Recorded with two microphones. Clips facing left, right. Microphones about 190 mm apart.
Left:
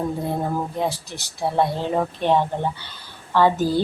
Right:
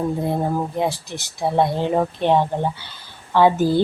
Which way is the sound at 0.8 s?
15° right (ahead or behind).